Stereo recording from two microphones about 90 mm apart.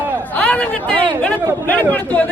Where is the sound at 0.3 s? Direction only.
15° left (ahead or behind).